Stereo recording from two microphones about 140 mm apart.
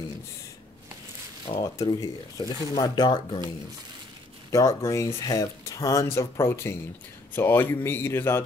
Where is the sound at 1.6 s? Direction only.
25° left (ahead or behind).